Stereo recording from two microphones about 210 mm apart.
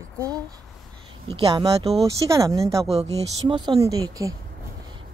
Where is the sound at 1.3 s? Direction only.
25° right (ahead or behind).